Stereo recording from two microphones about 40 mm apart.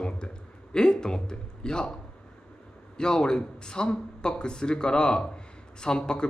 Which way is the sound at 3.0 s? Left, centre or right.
Left.